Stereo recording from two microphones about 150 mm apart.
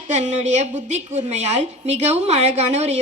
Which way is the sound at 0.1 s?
50° right (ahead or behind).